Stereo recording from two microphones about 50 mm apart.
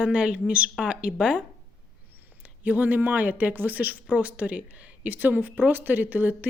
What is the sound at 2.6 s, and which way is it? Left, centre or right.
Speech, right.